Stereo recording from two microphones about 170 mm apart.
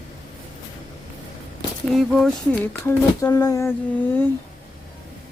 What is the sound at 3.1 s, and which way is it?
Humming, 20° left (ahead or behind).